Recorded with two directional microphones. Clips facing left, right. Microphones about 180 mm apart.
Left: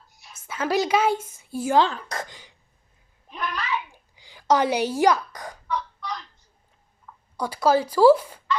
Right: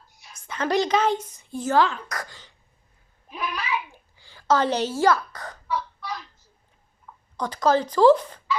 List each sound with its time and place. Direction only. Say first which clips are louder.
0.1 s a woman's voice: even; centre (ahead or behind)
1.8 s speech: even; 25° left (ahead or behind)
3.2 s a sound: even; 5° right (ahead or behind)
4.1 s speech: left 1 dB; 15° left (ahead or behind)
5.6 s a sound: even; 5° right (ahead or behind)
7.3 s speech: left 1 dB; 10° left (ahead or behind)